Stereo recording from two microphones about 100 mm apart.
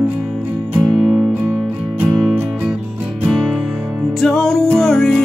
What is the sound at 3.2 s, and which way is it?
Music, 10° right (ahead or behind).